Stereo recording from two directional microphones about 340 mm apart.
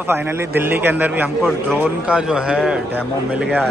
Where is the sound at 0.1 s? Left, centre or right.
Centre.